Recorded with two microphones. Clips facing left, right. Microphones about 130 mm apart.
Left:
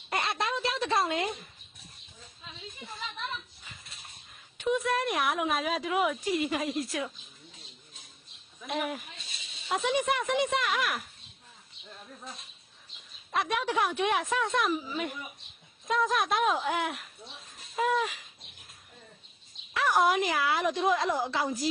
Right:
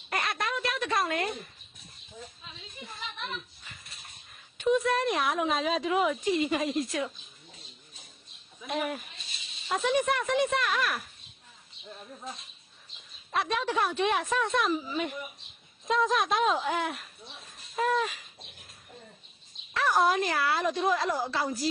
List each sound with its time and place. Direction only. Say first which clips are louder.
0.1 s a sound: left 1 dB; 25° left (ahead or behind)
4.5 s a woman's voice: right 3 dB; 15° left (ahead or behind)
8.6 s a woman's voice: right 1 dB; centre (ahead or behind)
13.3 s a woman's voice: even; 10° left (ahead or behind)
19.7 s speech: even; 15° left (ahead or behind)